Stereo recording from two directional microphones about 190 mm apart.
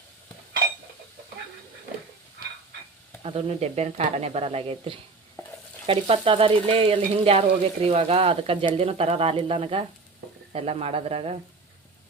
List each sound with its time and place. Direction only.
3.2 s frying: 30° right (ahead or behind)